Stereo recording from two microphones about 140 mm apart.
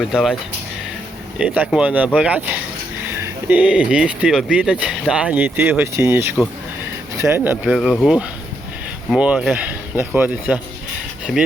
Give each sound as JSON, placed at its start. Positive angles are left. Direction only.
{"t": 0.1, "sound": "speech", "side_deg": -5}
{"t": 1.4, "sound": "speech", "side_deg": -5}
{"t": 7.6, "sound": "speech", "side_deg": 0}
{"t": 11.3, "sound": "speech", "side_deg": 0}